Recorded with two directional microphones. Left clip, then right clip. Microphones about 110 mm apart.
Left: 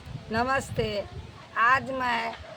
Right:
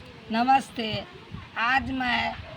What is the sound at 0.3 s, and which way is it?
Speech, 35° left (ahead or behind).